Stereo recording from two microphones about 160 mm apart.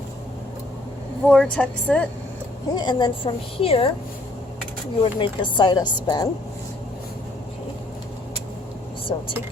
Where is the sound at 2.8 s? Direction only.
30° left (ahead or behind).